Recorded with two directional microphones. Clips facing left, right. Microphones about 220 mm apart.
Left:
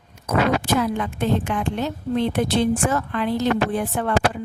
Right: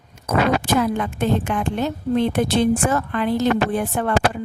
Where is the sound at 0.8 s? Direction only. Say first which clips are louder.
Right 2 dB; 50° right (ahead or behind).